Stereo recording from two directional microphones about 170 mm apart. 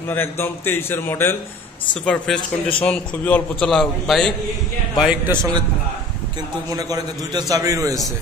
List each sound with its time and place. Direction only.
0.1 s a man's voice: 15° left (ahead or behind)
4.9 s a man's voice: 10° right (ahead or behind)
6.7 s a man's voice: 20° right (ahead or behind)